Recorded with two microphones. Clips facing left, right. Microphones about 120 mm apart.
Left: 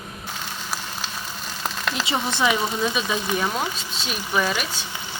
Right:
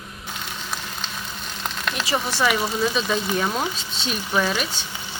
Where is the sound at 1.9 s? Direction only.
20° left (ahead or behind).